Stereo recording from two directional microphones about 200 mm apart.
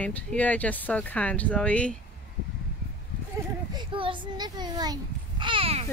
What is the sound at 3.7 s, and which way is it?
A child's voice, 25° right (ahead or behind).